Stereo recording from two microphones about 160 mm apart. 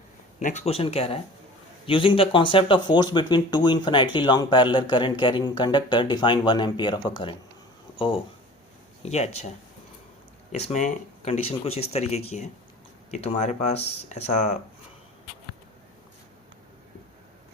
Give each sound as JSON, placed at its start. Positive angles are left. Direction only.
{"t": 0.3, "sound": "speech", "side_deg": 45}
{"t": 10.5, "sound": "speech", "side_deg": 45}